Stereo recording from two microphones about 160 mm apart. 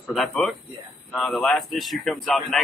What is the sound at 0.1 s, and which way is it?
A man's voice, 5° left (ahead or behind).